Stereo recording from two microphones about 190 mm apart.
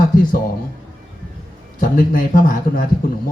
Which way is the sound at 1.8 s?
45° left (ahead or behind).